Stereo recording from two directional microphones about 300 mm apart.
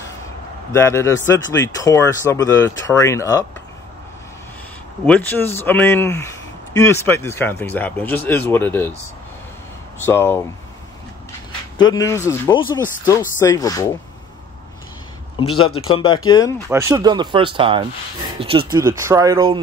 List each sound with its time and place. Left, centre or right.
0.7 s speech: centre
5.0 s speech: centre
10.0 s speech: centre
11.8 s speech: centre
15.3 s a man's voice: centre
16.6 s speech: centre